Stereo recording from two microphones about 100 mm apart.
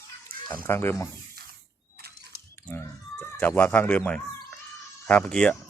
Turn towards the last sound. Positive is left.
turn(degrees=10)  # may be behind; listen again after turning